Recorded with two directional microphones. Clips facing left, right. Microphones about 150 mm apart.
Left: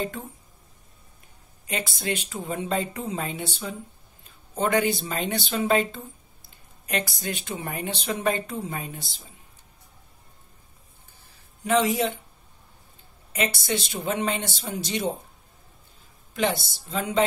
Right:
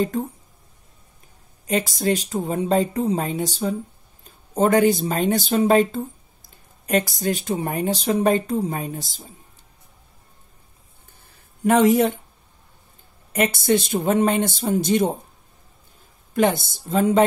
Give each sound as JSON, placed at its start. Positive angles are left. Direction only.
{"t": 1.7, "sound": "speech", "side_deg": -40}
{"t": 11.6, "sound": "speech", "side_deg": -55}
{"t": 13.3, "sound": "speech", "side_deg": -50}
{"t": 16.3, "sound": "speech", "side_deg": -50}